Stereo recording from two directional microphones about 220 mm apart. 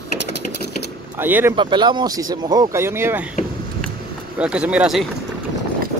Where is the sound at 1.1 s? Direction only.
10° right (ahead or behind).